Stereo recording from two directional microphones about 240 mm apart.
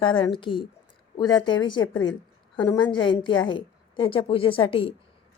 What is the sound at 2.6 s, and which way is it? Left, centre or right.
A woman's voice, centre.